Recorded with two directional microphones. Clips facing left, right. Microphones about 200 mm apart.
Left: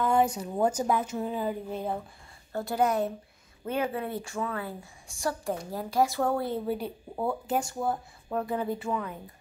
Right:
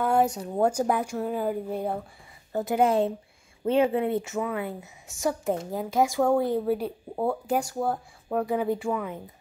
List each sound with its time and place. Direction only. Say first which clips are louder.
0.3 s speech: right 2 dB; centre (ahead or behind)
0.7 s a woman's voice: right 2 dB; 10° right (ahead or behind)